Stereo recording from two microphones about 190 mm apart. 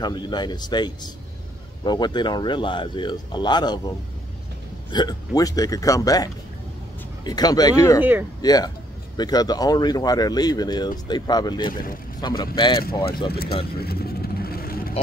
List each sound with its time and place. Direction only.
0.0 s speech: 25° left (ahead or behind)
4.9 s speech: 20° left (ahead or behind)
8.0 s speech: 10° right (ahead or behind)
8.4 s speech: 20° left (ahead or behind)
11.7 s speech: 45° left (ahead or behind)
12.2 s speech: 25° left (ahead or behind)
13.3 s speech: 55° left (ahead or behind)
13.7 s vehicle: 55° left (ahead or behind)